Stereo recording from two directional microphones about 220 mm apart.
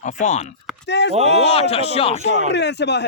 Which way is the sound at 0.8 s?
50° left (ahead or behind).